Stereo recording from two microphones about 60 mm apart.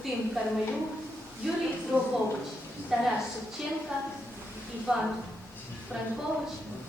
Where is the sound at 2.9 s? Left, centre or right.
Centre.